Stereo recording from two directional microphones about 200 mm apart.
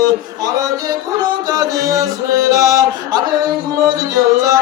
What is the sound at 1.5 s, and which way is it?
Chant, 15° right (ahead or behind).